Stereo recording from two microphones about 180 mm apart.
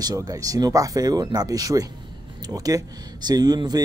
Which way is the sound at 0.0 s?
20° right (ahead or behind).